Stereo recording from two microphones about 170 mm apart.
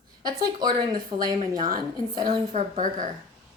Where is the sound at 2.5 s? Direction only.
50° right (ahead or behind).